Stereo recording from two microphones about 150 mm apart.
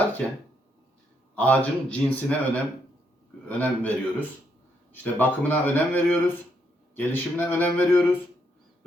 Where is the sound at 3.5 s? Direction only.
10° left (ahead or behind).